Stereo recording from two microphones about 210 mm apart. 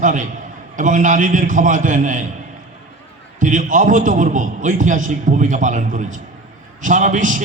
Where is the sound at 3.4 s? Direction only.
35° right (ahead or behind).